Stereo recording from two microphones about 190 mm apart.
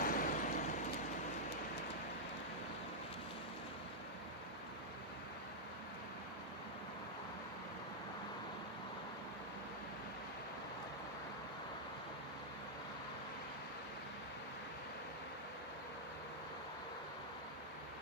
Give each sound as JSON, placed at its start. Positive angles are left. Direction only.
{"t": 0.0, "sound": "vehicle", "side_deg": 45}